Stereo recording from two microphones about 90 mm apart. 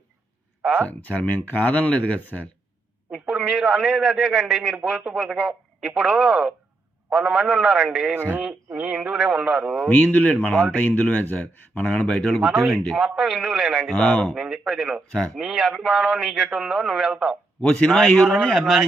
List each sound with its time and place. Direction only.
0.9 s speech: 15° left (ahead or behind)
3.1 s a man's voice: 5° right (ahead or behind)
8.1 s speech: 25° right (ahead or behind)
8.4 s a man's voice: 10° right (ahead or behind)
9.9 s a man's voice: 20° left (ahead or behind); by 13.9 s centre (ahead or behind)
13.9 s speech: 10° left (ahead or behind)
14.3 s a man's voice: 5° right (ahead or behind)
17.6 s a man's voice: 10° left (ahead or behind)